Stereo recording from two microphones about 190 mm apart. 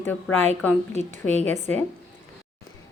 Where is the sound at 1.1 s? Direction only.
40° right (ahead or behind).